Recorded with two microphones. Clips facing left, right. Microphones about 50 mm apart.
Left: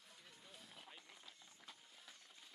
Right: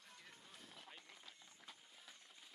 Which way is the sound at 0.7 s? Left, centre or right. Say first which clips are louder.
Right 1 dB; centre.